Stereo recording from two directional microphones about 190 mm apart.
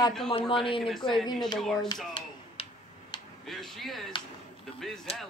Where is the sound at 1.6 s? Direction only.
Centre (ahead or behind).